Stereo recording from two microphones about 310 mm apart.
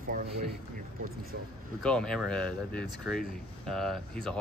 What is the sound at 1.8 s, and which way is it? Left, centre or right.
Speech, centre.